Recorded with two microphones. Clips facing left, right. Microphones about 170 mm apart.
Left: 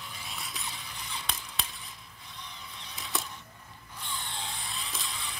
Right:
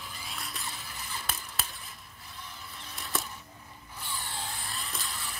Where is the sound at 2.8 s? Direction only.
Centre (ahead or behind).